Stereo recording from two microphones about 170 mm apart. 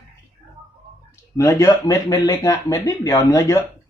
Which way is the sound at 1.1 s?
15° left (ahead or behind).